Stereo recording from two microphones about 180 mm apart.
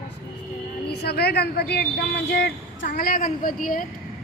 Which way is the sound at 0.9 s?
65° left (ahead or behind).